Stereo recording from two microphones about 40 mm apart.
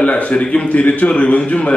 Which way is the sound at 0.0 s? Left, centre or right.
Left.